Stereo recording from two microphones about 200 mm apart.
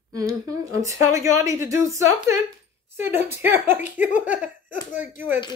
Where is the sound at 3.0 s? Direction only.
10° right (ahead or behind).